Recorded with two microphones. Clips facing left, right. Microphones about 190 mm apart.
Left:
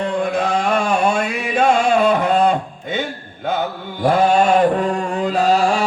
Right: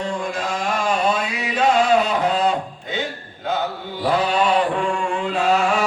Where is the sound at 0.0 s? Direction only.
60° left (ahead or behind).